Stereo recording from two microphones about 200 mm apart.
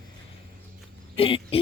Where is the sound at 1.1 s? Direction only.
25° left (ahead or behind).